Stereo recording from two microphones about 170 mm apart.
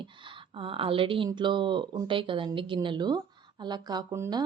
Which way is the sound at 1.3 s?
25° right (ahead or behind).